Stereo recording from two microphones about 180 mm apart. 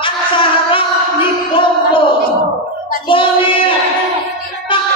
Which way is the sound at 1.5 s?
30° left (ahead or behind).